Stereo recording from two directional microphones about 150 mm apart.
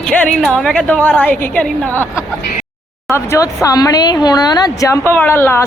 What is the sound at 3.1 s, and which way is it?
A woman's voice, 20° left (ahead or behind).